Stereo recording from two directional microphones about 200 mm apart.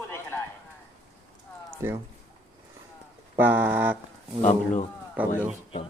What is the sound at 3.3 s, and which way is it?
Speech, 10° right (ahead or behind).